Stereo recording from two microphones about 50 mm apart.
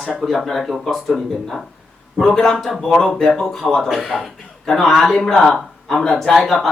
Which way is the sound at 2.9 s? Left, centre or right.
Centre.